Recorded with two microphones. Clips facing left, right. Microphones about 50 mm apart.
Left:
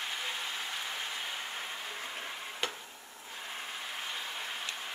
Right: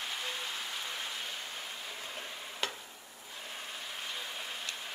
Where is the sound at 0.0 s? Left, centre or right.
Centre.